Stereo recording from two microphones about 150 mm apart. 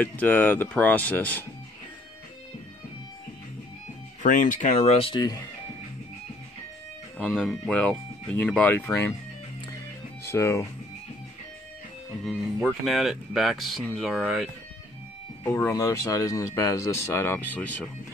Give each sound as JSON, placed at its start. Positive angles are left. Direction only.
{"t": 0.0, "sound": "speech", "side_deg": 10}
{"t": 4.2, "sound": "speech", "side_deg": 60}
{"t": 4.9, "sound": "speech", "side_deg": 35}
{"t": 7.2, "sound": "speech", "side_deg": 5}
{"t": 10.2, "sound": "speech", "side_deg": 15}
{"t": 12.3, "sound": "speech", "side_deg": 0}
{"t": 15.4, "sound": "speech", "side_deg": 20}